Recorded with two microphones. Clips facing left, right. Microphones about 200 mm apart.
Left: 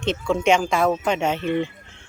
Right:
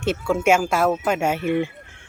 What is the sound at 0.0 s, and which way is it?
Speech, 10° right (ahead or behind).